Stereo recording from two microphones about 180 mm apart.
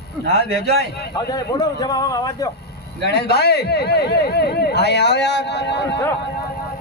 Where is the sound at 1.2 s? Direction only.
20° left (ahead or behind).